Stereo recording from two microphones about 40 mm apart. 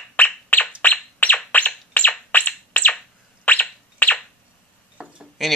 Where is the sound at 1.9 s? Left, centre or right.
Left.